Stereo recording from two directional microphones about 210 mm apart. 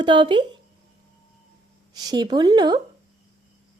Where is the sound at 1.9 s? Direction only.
20° right (ahead or behind).